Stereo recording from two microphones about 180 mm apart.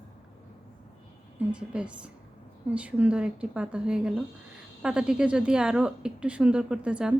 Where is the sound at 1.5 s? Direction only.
5° right (ahead or behind).